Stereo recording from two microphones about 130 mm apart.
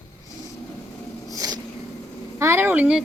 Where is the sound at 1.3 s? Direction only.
30° right (ahead or behind).